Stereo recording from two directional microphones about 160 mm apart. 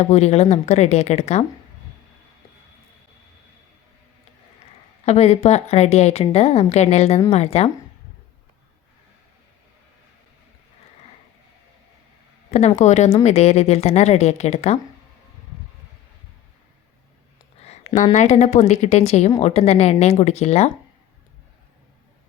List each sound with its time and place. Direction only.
0.0 s a woman's voice: 40° left (ahead or behind)
5.0 s a woman's voice: 40° left (ahead or behind)
12.5 s a woman's voice: 45° left (ahead or behind)
17.6 s a woman's voice: 45° left (ahead or behind)